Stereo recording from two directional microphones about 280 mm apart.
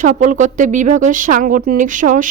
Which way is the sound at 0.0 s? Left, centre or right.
Right.